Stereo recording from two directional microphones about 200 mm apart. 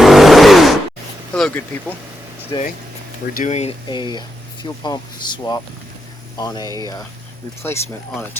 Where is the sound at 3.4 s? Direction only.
35° left (ahead or behind).